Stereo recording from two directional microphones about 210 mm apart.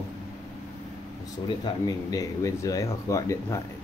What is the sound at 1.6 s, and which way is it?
Speech, 15° left (ahead or behind).